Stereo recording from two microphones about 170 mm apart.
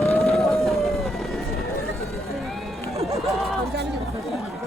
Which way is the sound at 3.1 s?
Centre (ahead or behind).